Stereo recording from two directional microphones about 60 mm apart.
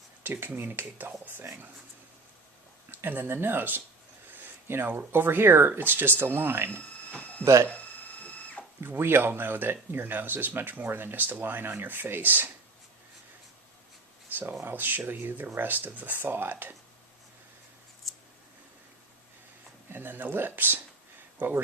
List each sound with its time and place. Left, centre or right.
0.2 s speech: right
2.9 s speech: right
7.1 s a sound: left
7.4 s speech: right
8.2 s a sound: left
8.8 s speech: right
14.6 s speech: right
18.0 s scissors: centre
19.9 s speech: right